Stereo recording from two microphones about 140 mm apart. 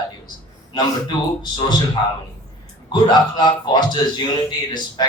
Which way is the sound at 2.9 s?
30° left (ahead or behind).